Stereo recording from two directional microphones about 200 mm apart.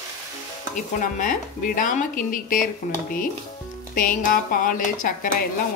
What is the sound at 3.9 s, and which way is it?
Speech, 45° left (ahead or behind).